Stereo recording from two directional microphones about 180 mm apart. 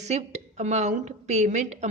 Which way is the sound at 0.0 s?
40° right (ahead or behind).